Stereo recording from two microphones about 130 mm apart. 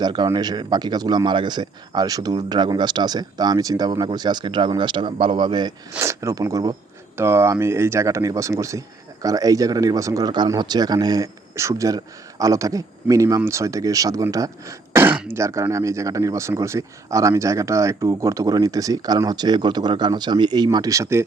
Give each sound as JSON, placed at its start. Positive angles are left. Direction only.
{"t": 0.0, "sound": "speech", "side_deg": -35}
{"t": 6.0, "sound": "speech", "side_deg": -20}